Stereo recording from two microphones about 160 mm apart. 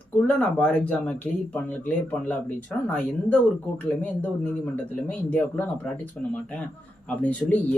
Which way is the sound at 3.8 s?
10° left (ahead or behind).